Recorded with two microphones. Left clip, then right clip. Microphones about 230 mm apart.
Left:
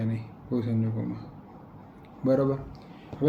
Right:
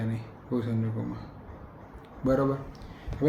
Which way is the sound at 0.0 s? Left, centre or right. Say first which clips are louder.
Left 1 dB; centre.